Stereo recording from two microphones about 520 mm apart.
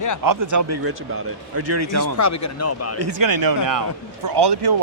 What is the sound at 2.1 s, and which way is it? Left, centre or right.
Speech, left.